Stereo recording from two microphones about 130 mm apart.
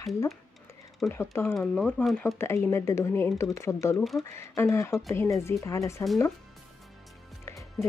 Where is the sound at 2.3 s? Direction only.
20° left (ahead or behind).